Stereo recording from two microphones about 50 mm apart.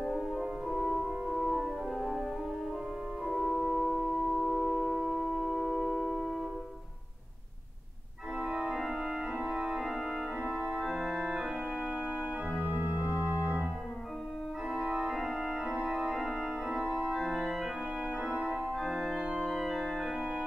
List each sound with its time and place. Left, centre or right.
0.0 s music: centre
3.3 s music: centre
8.4 s organ: centre
12.6 s music: right
14.7 s organ: centre